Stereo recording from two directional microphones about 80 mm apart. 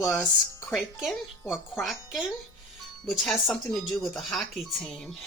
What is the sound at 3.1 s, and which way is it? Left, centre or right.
Speech, centre.